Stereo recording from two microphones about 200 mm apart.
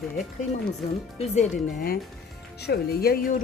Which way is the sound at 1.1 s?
35° left (ahead or behind).